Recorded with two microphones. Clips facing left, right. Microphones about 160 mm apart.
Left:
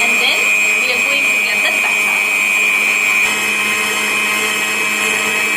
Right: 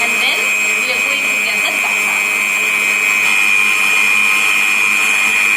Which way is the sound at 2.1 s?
15° left (ahead or behind).